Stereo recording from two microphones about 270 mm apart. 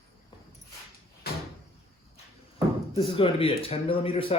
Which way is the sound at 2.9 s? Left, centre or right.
Centre.